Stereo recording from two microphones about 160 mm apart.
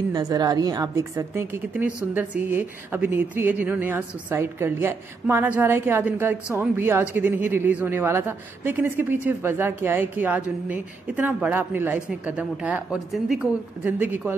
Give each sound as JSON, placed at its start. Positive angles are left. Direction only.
{"t": 0.1, "sound": "a woman's voice", "side_deg": -25}